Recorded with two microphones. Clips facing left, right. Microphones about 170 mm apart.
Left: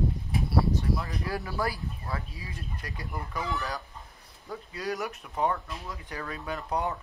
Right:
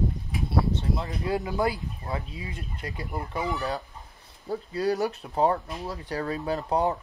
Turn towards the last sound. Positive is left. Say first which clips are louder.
# right 6 dB
turn(degrees=-30)  # may be behind; listen again after turning